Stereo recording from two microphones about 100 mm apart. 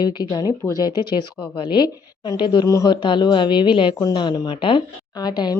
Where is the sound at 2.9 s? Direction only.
55° left (ahead or behind).